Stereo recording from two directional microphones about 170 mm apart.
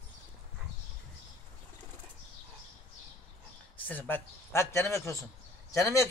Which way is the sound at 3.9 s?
10° left (ahead or behind).